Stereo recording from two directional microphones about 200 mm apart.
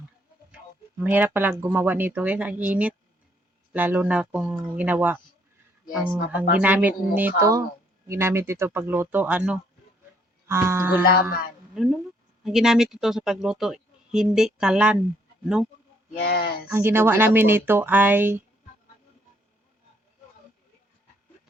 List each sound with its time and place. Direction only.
0.5 s speech: 10° right (ahead or behind)
11.1 s speech: 50° left (ahead or behind)
11.7 s speech: centre (ahead or behind)
16.2 s speech: 50° left (ahead or behind)
16.6 s speech: 10° right (ahead or behind)